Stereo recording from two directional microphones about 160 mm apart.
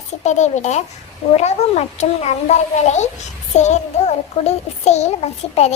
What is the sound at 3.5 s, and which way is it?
A child's voice, 45° left (ahead or behind).